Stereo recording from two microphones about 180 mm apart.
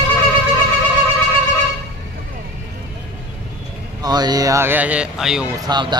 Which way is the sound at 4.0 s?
20° right (ahead or behind).